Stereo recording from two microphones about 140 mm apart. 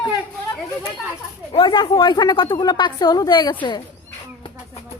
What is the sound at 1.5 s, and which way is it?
A woman's voice, 35° left (ahead or behind).